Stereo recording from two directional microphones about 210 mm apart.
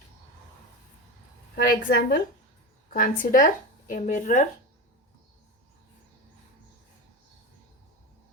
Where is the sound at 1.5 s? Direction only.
45° left (ahead or behind).